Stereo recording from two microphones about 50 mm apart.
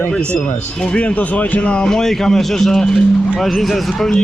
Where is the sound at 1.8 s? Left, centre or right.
Centre.